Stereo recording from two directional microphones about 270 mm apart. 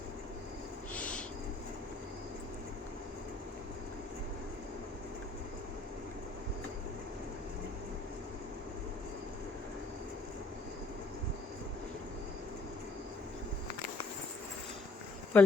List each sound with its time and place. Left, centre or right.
0.9 s owl: centre
15.3 s speech: centre